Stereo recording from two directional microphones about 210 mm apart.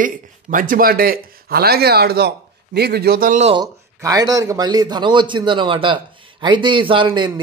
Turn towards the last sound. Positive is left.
turn(degrees=-20)  # may be behind; listen again after turning